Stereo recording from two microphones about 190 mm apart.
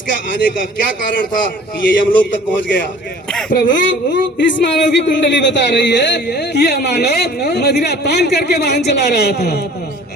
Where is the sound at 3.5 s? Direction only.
45° left (ahead or behind).